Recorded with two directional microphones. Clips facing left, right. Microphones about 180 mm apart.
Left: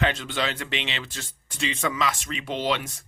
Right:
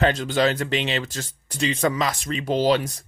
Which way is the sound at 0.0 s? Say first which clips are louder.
Right 6 dB; 40° right (ahead or behind).